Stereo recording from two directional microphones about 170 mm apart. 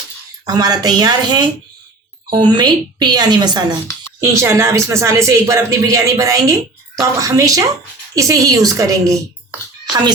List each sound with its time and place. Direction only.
0.4 s a woman's voice: 20° right (ahead or behind)